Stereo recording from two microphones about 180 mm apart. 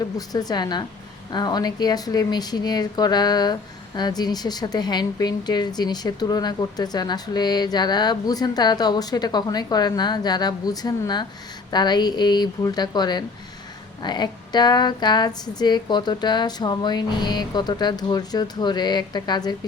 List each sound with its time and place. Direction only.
0.2 s a woman's voice: 20° left (ahead or behind)